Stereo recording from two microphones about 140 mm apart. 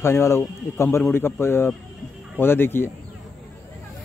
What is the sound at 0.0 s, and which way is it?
A man's voice, 20° left (ahead or behind).